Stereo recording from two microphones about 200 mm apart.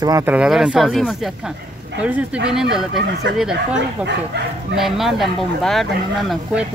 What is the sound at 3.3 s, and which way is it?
Speech, 60° right (ahead or behind).